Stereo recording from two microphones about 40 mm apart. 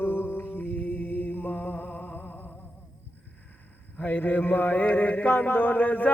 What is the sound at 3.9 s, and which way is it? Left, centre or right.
Mantra, left.